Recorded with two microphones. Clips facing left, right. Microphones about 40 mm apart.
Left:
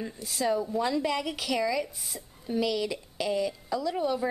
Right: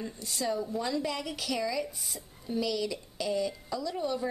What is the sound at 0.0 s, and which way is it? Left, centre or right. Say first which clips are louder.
A woman's voice: left 4 dB; centre.